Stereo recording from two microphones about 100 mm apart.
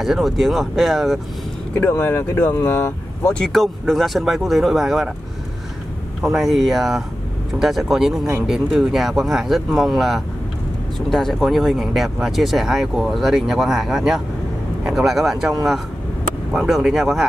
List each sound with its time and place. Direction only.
0.0 s speech: centre (ahead or behind)
1.8 s speech: 20° left (ahead or behind)
3.3 s speech: 5° left (ahead or behind)
6.2 s speech: 5° right (ahead or behind)
16.5 s speech: 5° right (ahead or behind)